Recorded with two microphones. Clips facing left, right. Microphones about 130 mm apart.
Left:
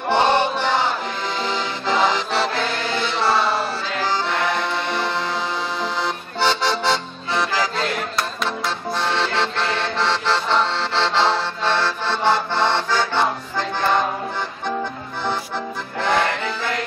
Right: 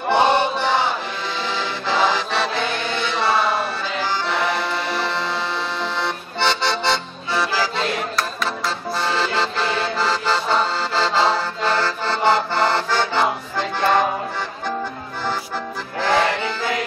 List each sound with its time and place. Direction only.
0.1 s music: 5° right (ahead or behind)
1.4 s accordion: centre (ahead or behind)
16.0 s music: centre (ahead or behind)